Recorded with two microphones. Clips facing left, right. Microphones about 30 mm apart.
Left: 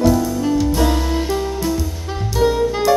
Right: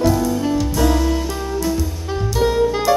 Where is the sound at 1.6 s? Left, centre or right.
Centre.